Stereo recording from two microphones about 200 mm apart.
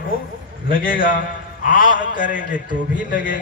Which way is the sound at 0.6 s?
45° left (ahead or behind).